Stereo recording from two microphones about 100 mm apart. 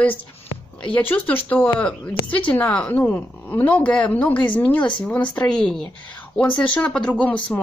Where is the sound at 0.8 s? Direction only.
15° left (ahead or behind).